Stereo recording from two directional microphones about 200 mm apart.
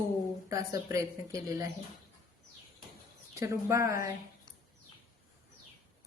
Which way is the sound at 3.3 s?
15° right (ahead or behind).